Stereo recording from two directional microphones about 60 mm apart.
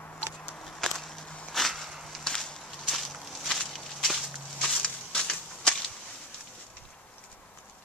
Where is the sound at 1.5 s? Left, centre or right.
Centre.